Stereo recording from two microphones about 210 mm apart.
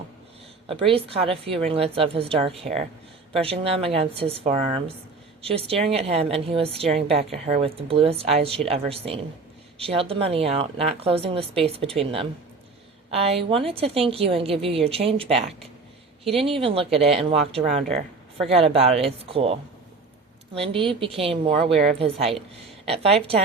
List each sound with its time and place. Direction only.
0.7 s a woman's voice: 25° right (ahead or behind)